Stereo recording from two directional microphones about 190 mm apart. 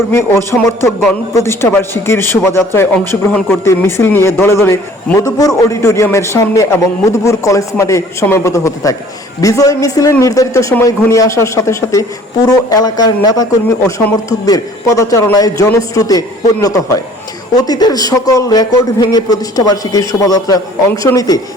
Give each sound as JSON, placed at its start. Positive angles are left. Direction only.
{"t": 0.1, "sound": "a man's voice", "side_deg": 15}